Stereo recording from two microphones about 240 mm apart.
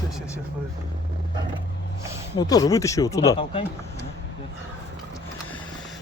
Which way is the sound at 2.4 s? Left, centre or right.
Centre.